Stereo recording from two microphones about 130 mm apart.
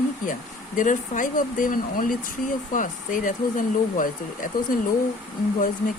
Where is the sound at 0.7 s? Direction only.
85° left.